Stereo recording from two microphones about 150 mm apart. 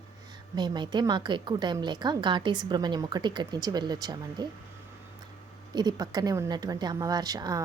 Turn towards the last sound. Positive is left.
turn(degrees=-25)  # may be behind; listen again after turning